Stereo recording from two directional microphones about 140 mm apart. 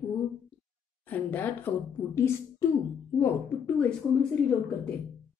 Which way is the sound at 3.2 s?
10° left (ahead or behind).